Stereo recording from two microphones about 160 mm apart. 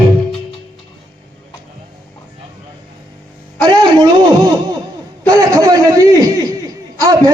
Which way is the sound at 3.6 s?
25° right (ahead or behind).